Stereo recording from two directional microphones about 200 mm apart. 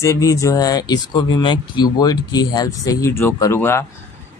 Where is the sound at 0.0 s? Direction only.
15° left (ahead or behind).